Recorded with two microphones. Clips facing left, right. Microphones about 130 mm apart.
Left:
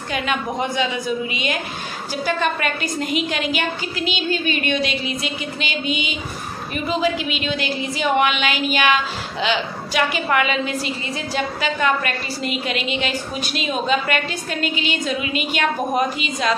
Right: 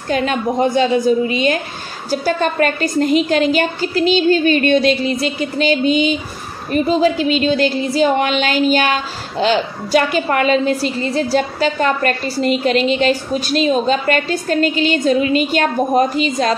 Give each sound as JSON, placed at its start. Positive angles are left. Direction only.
{"t": 0.1, "sound": "a woman's voice", "side_deg": -40}